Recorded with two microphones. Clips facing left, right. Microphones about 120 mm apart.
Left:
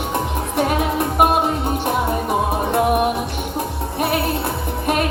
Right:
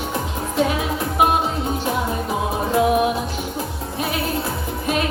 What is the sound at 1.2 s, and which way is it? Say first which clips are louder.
Music: left 1 dB; 60° left (ahead or behind).